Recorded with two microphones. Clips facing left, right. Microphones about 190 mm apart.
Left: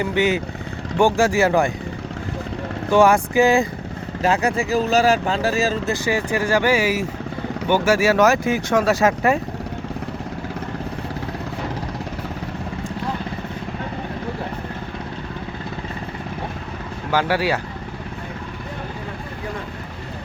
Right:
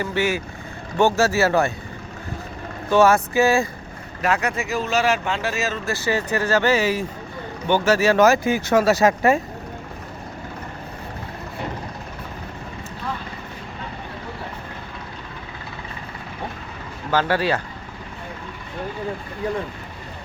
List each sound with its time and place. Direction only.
0.0 s speech: 15° left (ahead or behind)
2.9 s speech: 15° left (ahead or behind)
4.2 s speech: 30° left (ahead or behind)
5.8 s speech: 15° left (ahead or behind)
17.1 s speech: 10° left (ahead or behind)